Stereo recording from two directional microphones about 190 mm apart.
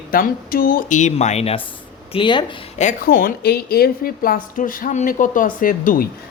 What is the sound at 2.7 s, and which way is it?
Speech, 45° left (ahead or behind).